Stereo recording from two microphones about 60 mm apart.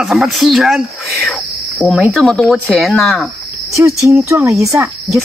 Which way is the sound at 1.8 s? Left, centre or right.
Left.